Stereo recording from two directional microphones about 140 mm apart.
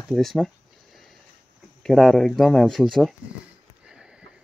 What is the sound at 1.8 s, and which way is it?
Speech, 5° left (ahead or behind).